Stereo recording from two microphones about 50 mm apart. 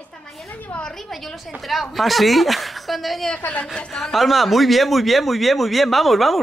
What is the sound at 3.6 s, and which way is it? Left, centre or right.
Speech, centre.